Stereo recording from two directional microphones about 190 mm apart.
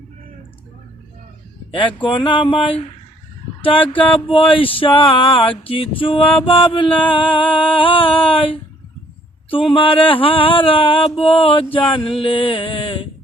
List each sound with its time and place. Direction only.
1.7 s mantra: 25° left (ahead or behind)